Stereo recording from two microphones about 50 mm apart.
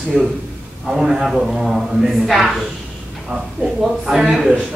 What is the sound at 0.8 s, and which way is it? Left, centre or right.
A man's voice, centre.